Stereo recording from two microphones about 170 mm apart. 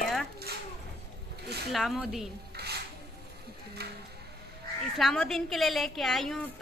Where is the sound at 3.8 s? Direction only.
70° right (ahead or behind).